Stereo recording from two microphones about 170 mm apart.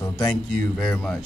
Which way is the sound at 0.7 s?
5° left (ahead or behind).